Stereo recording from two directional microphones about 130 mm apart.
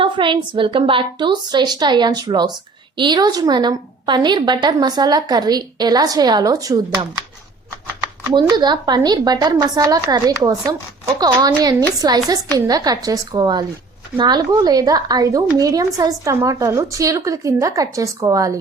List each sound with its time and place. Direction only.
0.0 s a woman's voice: 40° right (ahead or behind)
8.3 s a woman's voice: 35° right (ahead or behind)